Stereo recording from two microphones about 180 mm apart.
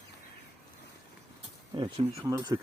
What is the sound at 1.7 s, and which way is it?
Speech, 30° right (ahead or behind).